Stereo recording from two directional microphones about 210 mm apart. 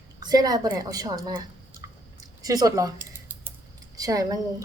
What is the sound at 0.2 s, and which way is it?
A woman's voice, 20° right (ahead or behind).